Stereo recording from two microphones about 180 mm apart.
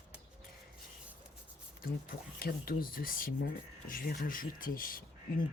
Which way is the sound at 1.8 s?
55° left (ahead or behind).